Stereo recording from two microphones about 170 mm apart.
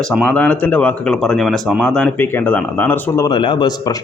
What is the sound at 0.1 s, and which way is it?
Speech, 5° left (ahead or behind).